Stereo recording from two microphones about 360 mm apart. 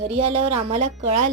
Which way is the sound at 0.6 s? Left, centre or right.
Centre.